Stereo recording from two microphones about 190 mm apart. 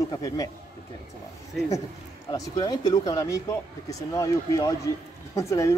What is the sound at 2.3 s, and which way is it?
A man's voice, 20° left (ahead or behind).